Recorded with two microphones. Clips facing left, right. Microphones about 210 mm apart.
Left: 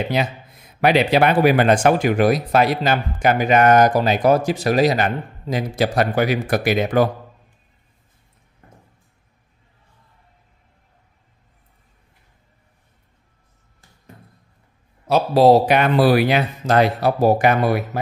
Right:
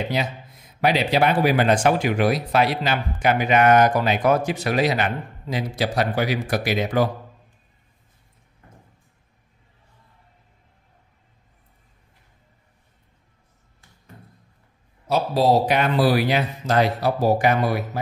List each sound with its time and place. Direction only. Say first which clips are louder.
0.2 s speech: left 4 dB; 60° left (ahead or behind)
15.0 s speech: left 6 dB; 65° left (ahead or behind)